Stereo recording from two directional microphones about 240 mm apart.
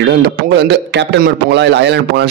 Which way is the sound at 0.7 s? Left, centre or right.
Right.